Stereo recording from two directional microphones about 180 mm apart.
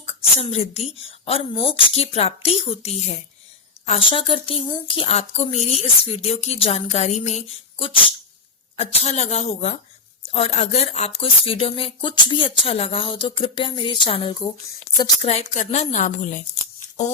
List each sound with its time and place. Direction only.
0.1 s speech: 35° left (ahead or behind)
15.3 s a woman's voice: 40° left (ahead or behind)